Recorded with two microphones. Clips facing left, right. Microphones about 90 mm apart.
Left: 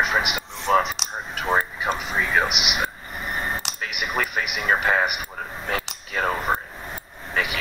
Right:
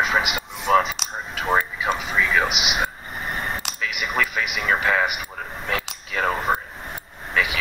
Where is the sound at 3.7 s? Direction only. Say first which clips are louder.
Right 4 dB; 50° left (ahead or behind).